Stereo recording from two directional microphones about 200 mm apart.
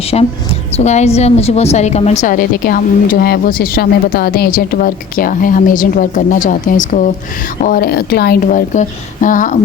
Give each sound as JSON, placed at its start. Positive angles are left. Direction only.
{"t": 0.1, "sound": "a woman's voice", "side_deg": 30}